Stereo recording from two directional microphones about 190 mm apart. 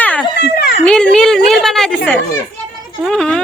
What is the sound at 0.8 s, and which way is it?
Speech, 5° left (ahead or behind).